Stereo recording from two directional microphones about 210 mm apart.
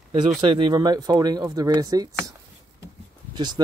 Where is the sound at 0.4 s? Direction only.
20° right (ahead or behind).